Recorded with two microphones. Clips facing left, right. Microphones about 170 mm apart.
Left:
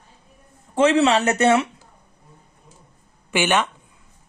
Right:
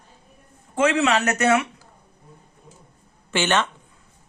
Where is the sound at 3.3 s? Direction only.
15° left (ahead or behind).